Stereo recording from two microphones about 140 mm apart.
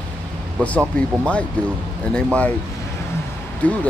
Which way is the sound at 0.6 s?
10° left (ahead or behind).